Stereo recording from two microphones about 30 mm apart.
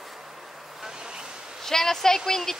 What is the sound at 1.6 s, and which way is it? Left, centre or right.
Speech, centre.